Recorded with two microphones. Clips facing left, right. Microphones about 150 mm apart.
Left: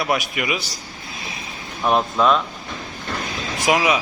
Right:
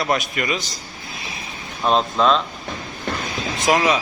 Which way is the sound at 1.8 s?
20° right (ahead or behind).